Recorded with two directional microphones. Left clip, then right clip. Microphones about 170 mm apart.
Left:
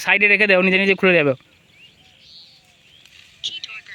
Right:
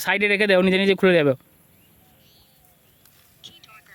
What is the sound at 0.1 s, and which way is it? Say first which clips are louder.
Speech: left 4 dB; 15° right (ahead or behind).